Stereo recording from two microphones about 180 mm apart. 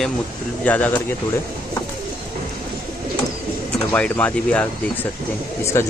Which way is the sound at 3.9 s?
5° left (ahead or behind).